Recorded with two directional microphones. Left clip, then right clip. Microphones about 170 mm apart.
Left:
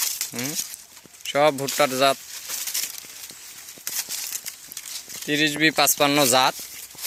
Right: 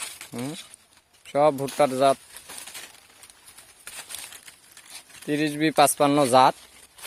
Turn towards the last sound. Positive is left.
turn(degrees=-10)  # may be behind; listen again after turning